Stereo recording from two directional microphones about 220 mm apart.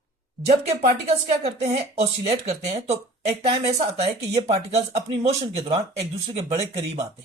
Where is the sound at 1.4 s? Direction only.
30° right (ahead or behind).